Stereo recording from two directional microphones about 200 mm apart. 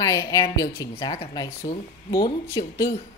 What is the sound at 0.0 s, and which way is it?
A woman's voice, 15° left (ahead or behind).